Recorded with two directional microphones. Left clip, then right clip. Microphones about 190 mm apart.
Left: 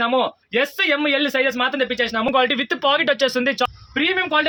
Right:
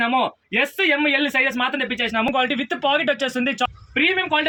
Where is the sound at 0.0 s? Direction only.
20° left (ahead or behind).